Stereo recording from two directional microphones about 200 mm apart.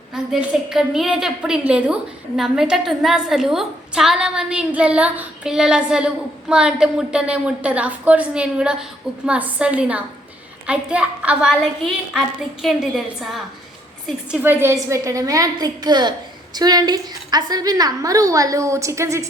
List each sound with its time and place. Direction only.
0.1 s a woman's voice: centre (ahead or behind)